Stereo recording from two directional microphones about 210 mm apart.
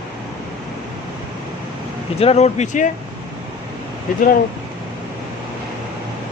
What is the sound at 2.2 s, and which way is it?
Speech, 30° left (ahead or behind).